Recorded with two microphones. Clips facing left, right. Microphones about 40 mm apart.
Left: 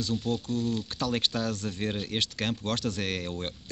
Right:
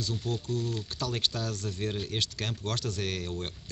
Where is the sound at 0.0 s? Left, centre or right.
Left.